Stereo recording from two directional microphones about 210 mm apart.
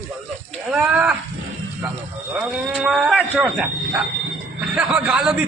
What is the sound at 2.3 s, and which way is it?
A man's voice, 5° right (ahead or behind).